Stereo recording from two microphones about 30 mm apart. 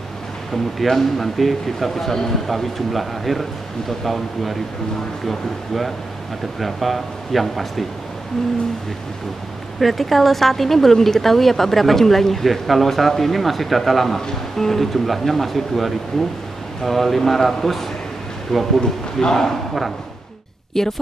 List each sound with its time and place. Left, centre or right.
0.8 s speech: centre
9.8 s speech: centre
18.5 s a man's voice: centre
19.2 s speech: centre
20.7 s speech: centre